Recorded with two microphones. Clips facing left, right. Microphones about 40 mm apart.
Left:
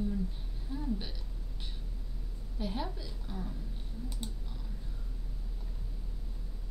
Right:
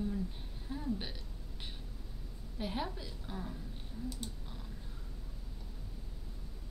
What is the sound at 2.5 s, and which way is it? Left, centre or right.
A woman's voice, centre.